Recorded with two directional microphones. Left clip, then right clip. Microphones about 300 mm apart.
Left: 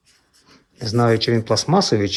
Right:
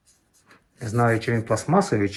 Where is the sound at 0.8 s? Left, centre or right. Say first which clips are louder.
Left 4 dB; left.